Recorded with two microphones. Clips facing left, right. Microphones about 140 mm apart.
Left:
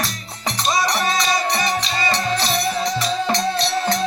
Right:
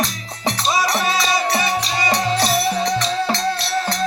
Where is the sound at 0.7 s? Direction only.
5° right (ahead or behind).